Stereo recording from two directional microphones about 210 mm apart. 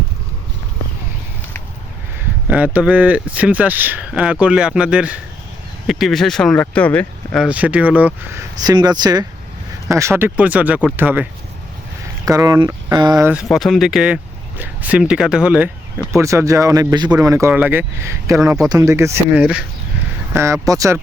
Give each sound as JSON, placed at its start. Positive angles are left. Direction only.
{"t": 2.7, "sound": "speech", "side_deg": -5}
{"t": 7.4, "sound": "speech", "side_deg": -5}
{"t": 13.3, "sound": "speech", "side_deg": 0}